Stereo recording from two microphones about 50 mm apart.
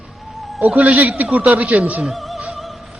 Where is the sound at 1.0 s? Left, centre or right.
Right.